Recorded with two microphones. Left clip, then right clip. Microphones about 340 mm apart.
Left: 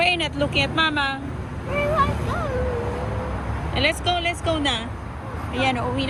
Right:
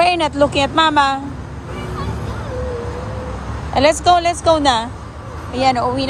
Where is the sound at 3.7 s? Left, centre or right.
Right.